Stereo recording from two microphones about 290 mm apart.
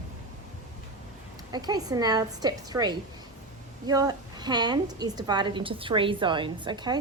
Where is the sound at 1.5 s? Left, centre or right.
Centre.